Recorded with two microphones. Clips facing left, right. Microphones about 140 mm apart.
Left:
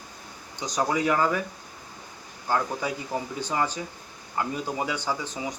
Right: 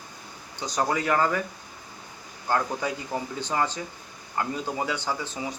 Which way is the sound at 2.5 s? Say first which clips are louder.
Even; 10° left (ahead or behind).